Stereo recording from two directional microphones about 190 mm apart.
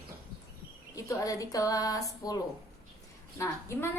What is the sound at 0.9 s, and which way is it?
A woman's voice, 15° left (ahead or behind).